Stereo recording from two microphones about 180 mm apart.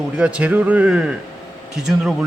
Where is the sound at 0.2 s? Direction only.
5° right (ahead or behind).